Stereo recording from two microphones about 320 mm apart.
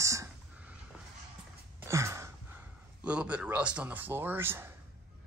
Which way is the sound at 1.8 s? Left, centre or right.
Centre.